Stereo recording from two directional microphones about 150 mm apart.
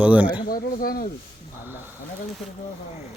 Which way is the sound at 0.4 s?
75° left (ahead or behind).